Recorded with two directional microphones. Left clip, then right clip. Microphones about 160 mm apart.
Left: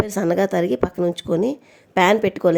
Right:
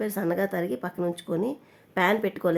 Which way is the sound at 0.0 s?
45° left (ahead or behind).